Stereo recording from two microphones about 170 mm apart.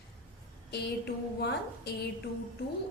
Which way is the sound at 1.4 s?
85° left.